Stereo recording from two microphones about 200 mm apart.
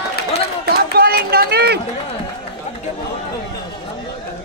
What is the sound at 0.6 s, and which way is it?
Run, 50° right (ahead or behind).